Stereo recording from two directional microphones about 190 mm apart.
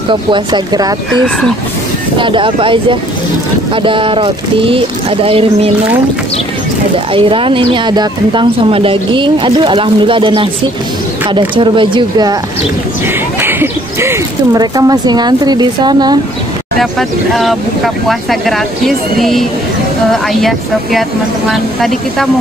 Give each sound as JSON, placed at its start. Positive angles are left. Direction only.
{"t": 0.1, "sound": "a woman's voice", "side_deg": -25}
{"t": 2.1, "sound": "a woman's voice", "side_deg": -25}
{"t": 7.2, "sound": "a woman's voice", "side_deg": -25}
{"t": 13.4, "sound": "speech", "side_deg": -10}
{"t": 17.3, "sound": "speech", "side_deg": 0}